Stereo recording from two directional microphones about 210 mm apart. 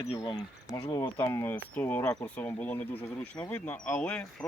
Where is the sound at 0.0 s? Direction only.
20° left (ahead or behind).